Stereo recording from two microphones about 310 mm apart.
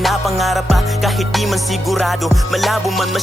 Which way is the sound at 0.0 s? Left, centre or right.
Centre.